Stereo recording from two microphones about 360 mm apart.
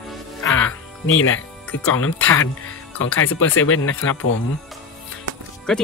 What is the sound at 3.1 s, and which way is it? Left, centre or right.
Speech, left.